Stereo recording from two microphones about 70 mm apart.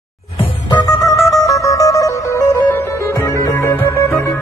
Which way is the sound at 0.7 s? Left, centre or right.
Left.